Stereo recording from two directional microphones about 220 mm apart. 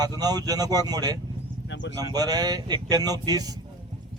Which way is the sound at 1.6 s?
55° left (ahead or behind).